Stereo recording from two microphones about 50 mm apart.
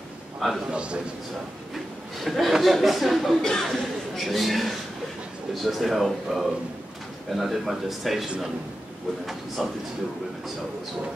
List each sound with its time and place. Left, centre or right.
0.7 s a man's voice: right
2.2 s a man's voice: centre